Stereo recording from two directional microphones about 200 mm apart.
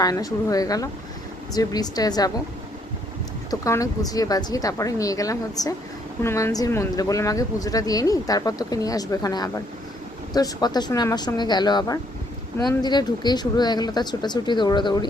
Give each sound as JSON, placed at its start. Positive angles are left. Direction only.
{"t": 0.0, "sound": "speech", "side_deg": 20}
{"t": 3.5, "sound": "speech", "side_deg": 15}